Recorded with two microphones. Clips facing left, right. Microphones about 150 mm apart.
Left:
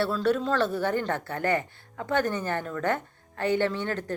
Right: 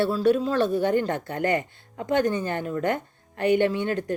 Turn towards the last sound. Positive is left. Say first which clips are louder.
# right 4 dB
turn(degrees=-15)  # may be behind; listen again after turning